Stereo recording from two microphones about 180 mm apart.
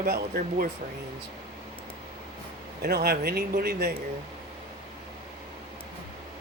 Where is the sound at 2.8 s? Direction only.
60° right (ahead or behind).